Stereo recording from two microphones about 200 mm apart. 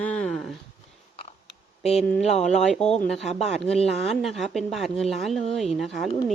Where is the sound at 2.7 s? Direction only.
5° left (ahead or behind).